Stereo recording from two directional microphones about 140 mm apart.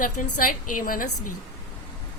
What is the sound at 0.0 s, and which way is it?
A woman's voice, 75° left (ahead or behind).